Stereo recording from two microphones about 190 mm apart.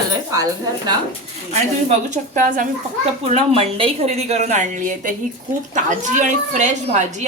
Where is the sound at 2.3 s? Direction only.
45° right (ahead or behind).